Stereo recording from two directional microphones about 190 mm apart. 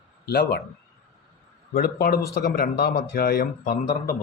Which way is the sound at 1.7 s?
55° left (ahead or behind).